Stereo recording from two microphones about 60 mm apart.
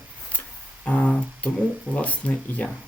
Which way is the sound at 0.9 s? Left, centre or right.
Left.